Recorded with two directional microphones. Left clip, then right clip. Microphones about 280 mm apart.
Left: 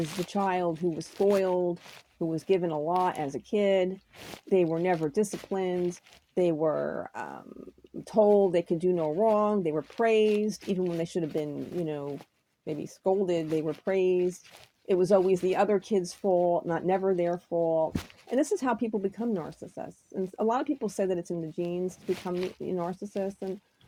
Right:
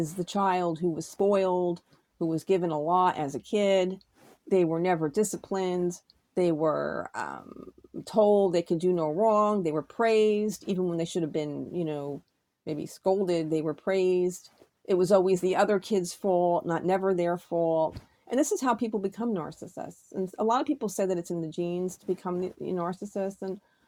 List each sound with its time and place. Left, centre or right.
0.3 s speech: right